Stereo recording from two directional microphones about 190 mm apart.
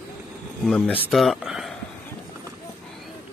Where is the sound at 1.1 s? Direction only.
Centre (ahead or behind).